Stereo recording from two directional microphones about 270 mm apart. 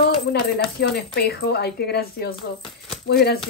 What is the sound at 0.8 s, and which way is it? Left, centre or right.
Speech, left.